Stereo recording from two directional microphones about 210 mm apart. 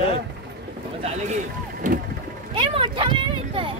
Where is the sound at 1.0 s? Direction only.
35° right (ahead or behind).